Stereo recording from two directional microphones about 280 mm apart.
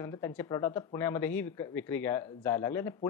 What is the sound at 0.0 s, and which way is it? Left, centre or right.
Speech, centre.